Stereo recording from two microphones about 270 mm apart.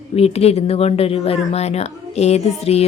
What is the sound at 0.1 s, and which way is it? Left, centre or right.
A woman's voice, left.